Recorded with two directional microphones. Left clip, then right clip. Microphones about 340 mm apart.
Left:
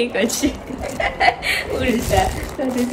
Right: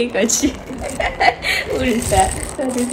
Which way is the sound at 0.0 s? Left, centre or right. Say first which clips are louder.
Right 2 dB; centre.